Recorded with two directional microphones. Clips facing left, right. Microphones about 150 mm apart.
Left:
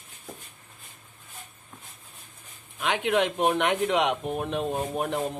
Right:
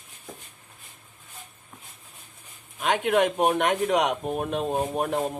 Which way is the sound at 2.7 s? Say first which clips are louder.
Right 2 dB; 45° right (ahead or behind).